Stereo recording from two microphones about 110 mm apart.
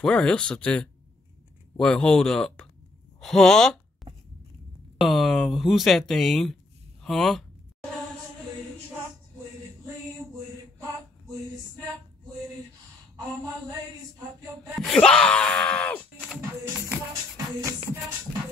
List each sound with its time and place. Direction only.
0.0 s speech: 10° left (ahead or behind)
3.2 s a sound: centre (ahead or behind)
4.9 s speech: centre (ahead or behind)
14.8 s speech: 5° left (ahead or behind)
17.6 s music: 30° right (ahead or behind)